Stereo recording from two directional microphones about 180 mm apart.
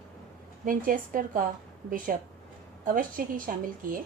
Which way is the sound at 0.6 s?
50° right (ahead or behind).